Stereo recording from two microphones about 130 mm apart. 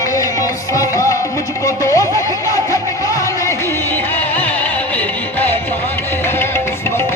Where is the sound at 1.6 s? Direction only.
25° left (ahead or behind).